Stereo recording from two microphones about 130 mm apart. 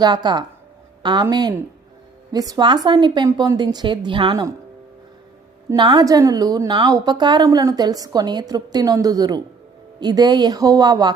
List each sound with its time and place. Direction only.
0.0 s speech: 35° right (ahead or behind)
5.7 s a woman's voice: 35° right (ahead or behind)